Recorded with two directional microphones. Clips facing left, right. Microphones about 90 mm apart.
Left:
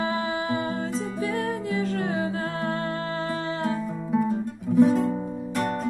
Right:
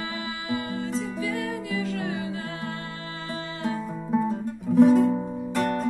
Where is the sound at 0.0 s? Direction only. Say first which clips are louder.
Left 7 dB; 35° left (ahead or behind).